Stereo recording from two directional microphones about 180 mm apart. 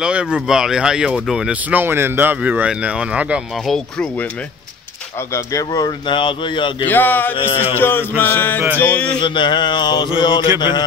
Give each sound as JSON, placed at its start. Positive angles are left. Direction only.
{"t": 0.0, "sound": "speech", "side_deg": -5}
{"t": 5.3, "sound": "speech", "side_deg": 20}
{"t": 6.9, "sound": "a sound", "side_deg": 10}
{"t": 7.3, "sound": "music", "side_deg": 30}
{"t": 7.7, "sound": "a sound", "side_deg": 10}
{"t": 9.2, "sound": "speech", "side_deg": 25}